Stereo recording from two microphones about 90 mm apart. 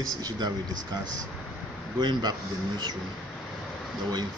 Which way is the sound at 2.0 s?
55° right (ahead or behind).